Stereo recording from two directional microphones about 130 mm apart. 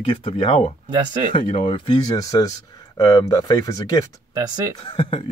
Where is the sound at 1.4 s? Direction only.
90° left.